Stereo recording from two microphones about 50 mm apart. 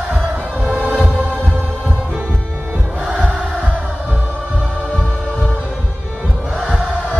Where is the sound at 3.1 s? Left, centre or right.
Right.